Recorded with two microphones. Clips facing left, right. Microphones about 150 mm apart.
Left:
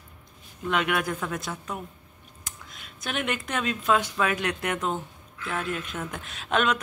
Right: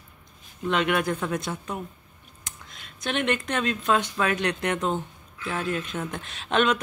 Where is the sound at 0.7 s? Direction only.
5° left (ahead or behind).